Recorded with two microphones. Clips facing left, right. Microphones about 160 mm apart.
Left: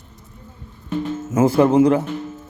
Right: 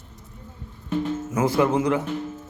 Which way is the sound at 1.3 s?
30° left (ahead or behind).